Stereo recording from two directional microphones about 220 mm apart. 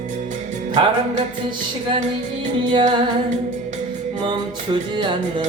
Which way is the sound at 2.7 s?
20° right (ahead or behind).